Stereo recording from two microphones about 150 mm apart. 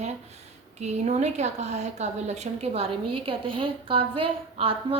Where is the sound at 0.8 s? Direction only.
50° right (ahead or behind).